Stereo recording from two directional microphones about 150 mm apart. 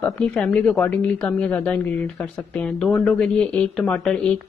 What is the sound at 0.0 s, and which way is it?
A woman's voice, 5° left (ahead or behind).